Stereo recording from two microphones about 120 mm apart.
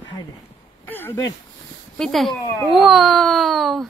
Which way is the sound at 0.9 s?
15° left (ahead or behind).